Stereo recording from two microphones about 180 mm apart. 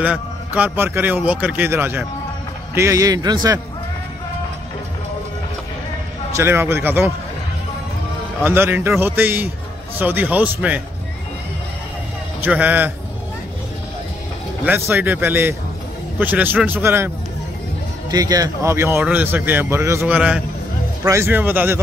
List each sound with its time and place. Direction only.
0.0 s a man's voice: 5° right (ahead or behind)
6.3 s speech: 15° right (ahead or behind)
8.5 s speech: 10° right (ahead or behind)
12.4 s speech: 10° right (ahead or behind)
14.9 s speech: 10° right (ahead or behind)
18.1 s speech: 20° right (ahead or behind)